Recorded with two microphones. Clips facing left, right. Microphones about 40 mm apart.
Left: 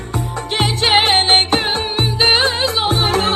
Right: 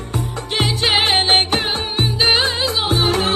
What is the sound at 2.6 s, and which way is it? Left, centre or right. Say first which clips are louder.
Music: left 1 dB; left.